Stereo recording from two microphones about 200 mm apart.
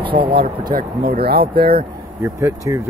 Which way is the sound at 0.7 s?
50° right (ahead or behind).